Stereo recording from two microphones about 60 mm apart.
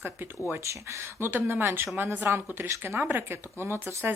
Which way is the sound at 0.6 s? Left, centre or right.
Right.